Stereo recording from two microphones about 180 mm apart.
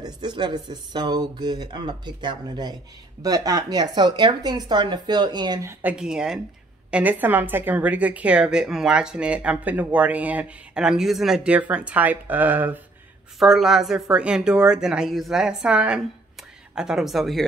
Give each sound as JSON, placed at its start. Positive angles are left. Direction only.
{"t": 0.0, "sound": "a woman's voice", "side_deg": -25}